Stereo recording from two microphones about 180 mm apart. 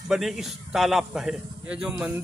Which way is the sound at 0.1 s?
Centre (ahead or behind).